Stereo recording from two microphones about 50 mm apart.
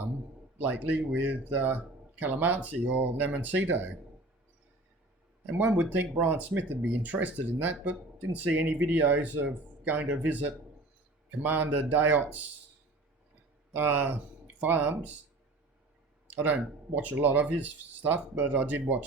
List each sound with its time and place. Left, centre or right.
0.6 s speech: right
5.5 s speech: right
13.7 s speech: right
16.2 s speech: right